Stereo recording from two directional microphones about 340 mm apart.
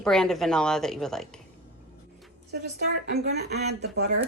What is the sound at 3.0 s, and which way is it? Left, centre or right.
Speech, right.